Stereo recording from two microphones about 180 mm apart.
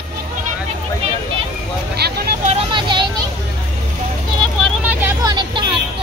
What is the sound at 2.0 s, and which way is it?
Vehicle, 65° right (ahead or behind).